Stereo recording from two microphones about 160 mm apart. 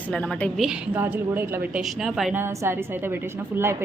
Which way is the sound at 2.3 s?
15° right (ahead or behind).